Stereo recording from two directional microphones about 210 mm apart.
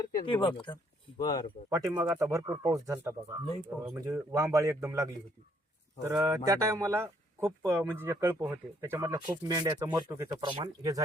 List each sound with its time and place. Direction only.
0.0 s a sound: 25° left (ahead or behind)
0.4 s speech: 20° left (ahead or behind)
1.7 s speech: 15° right (ahead or behind)